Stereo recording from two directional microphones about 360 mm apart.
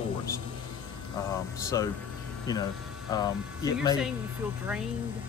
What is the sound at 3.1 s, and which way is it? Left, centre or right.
Speech, centre.